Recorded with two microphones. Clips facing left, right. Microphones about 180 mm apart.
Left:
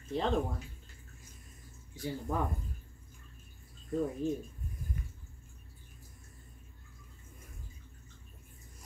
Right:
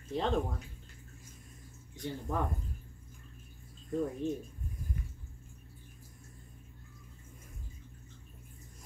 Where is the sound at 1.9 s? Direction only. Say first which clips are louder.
Left 1 dB; 5° left (ahead or behind).